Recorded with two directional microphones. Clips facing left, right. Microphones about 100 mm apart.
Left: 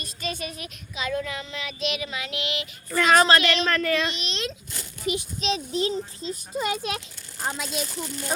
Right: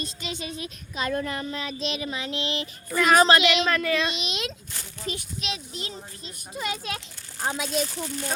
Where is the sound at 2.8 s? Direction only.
5° right (ahead or behind).